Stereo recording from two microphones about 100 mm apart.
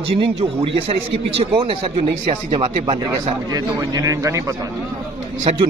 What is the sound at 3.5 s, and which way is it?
A man's voice, 35° right (ahead or behind).